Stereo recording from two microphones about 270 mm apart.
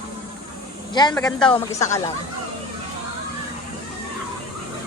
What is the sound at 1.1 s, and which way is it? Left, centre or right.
Speech, centre.